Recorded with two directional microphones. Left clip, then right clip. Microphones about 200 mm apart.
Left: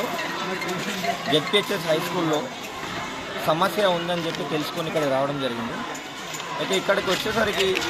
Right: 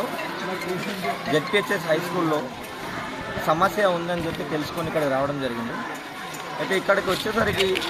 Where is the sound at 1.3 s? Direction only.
10° right (ahead or behind).